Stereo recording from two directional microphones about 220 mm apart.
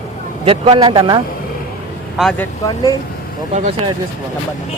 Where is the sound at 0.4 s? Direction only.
25° right (ahead or behind).